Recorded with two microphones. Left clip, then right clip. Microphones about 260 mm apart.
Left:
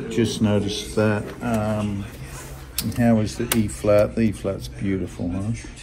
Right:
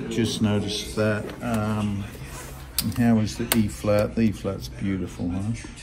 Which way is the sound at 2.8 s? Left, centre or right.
Centre.